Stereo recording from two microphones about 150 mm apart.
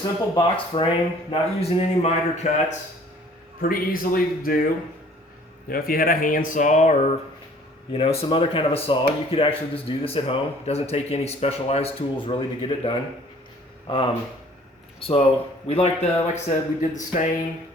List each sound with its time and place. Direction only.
0.3 s speech: 35° left (ahead or behind)
3.6 s speech: 70° left (ahead or behind)
5.6 s speech: 75° left (ahead or behind); by 7.1 s 55° left (ahead or behind)
7.9 s speech: 40° left (ahead or behind)
15.6 s speech: 45° left (ahead or behind)